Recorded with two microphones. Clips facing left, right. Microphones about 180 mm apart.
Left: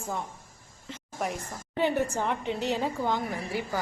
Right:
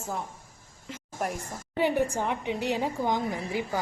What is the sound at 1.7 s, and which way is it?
A woman's voice, 15° right (ahead or behind).